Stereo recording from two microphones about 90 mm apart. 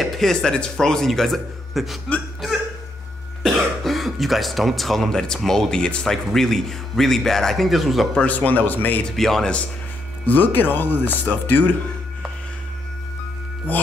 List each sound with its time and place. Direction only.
0.0 s speech: 5° left (ahead or behind)
3.4 s speech: centre (ahead or behind)
8.2 s speech: 15° left (ahead or behind)
9.1 s speech: 5° left (ahead or behind)
10.2 s speech: 20° left (ahead or behind)